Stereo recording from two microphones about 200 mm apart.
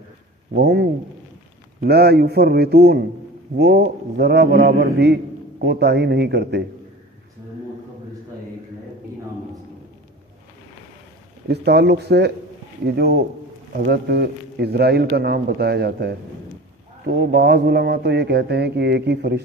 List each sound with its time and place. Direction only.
0.5 s a man's voice: 55° right (ahead or behind)
11.4 s a man's voice: 55° right (ahead or behind)